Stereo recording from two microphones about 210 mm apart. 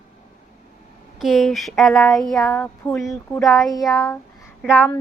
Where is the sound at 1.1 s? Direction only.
Centre (ahead or behind).